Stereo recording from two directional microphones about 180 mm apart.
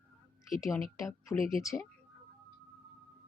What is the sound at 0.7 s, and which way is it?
Speech, 15° left (ahead or behind).